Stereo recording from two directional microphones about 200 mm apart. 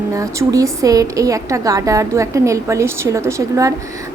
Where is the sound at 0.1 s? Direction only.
15° right (ahead or behind).